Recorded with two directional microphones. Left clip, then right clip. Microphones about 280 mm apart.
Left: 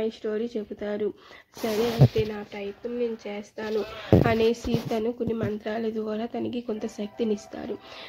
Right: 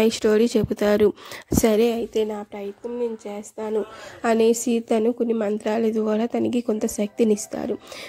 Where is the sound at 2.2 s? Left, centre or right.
Right.